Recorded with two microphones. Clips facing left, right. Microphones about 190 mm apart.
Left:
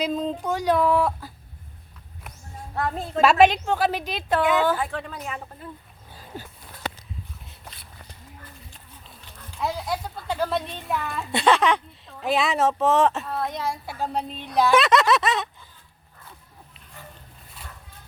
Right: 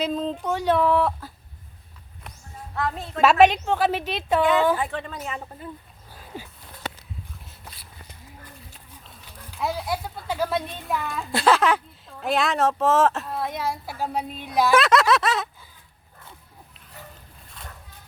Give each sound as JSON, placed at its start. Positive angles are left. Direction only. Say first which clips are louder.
{"t": 0.0, "sound": "speech", "louder": "even", "side_deg": 0}
{"t": 2.7, "sound": "a woman's voice", "louder": "left 1 dB", "side_deg": 35}
{"t": 3.2, "sound": "speech", "louder": "even", "side_deg": -5}
{"t": 8.7, "sound": "speech", "louder": "even", "side_deg": -5}